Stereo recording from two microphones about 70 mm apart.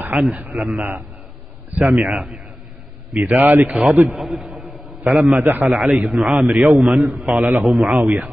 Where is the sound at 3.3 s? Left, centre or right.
Right.